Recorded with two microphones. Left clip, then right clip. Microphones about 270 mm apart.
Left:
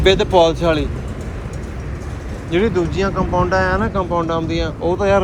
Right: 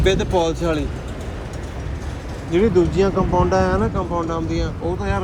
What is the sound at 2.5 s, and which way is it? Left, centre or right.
Speech, centre.